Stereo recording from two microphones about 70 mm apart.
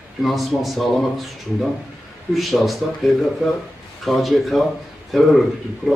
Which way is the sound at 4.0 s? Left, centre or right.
Centre.